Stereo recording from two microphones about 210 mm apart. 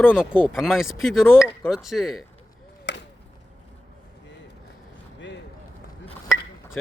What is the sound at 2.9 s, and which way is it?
Chop, 55° left (ahead or behind).